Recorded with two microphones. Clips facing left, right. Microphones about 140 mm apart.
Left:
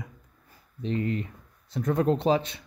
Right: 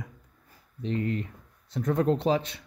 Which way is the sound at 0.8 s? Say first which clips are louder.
Left 1 dB; 20° left (ahead or behind).